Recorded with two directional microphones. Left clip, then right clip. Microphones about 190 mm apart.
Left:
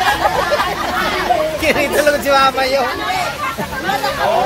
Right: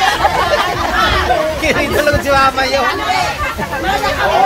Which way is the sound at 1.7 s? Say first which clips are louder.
Left 1 dB; 40° left (ahead or behind).